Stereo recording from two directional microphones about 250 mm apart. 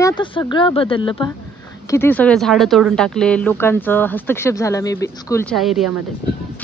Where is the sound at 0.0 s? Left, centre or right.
Centre.